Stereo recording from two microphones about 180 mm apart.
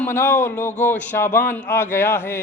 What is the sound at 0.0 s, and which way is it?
A man's voice, 15° left (ahead or behind).